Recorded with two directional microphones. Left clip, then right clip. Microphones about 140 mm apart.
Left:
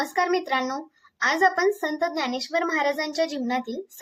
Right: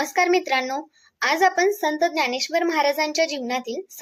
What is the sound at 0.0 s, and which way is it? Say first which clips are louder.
A child's voice: right 4 dB; 20° right (ahead or behind).